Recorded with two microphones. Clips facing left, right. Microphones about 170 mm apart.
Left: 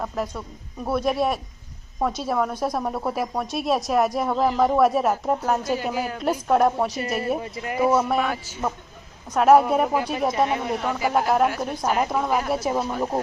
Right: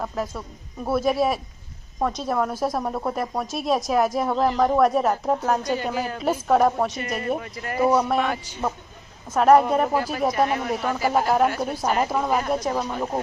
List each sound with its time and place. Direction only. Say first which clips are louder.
0.0 s a woman's voice: even; centre (ahead or behind)
7.3 s speech: left 2 dB; 25° left (ahead or behind)
7.9 s a woman's voice: even; 5° left (ahead or behind)